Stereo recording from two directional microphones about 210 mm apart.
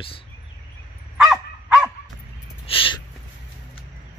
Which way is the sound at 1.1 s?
5° right (ahead or behind).